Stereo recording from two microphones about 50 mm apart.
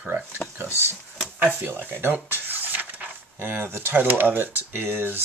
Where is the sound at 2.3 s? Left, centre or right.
Right.